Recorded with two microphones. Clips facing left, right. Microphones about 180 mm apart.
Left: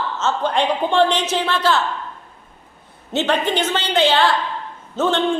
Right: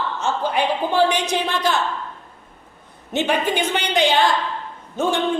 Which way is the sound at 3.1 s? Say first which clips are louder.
Left 1 dB; 10° right (ahead or behind).